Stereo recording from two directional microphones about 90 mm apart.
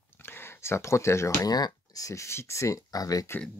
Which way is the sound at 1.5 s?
50° left (ahead or behind).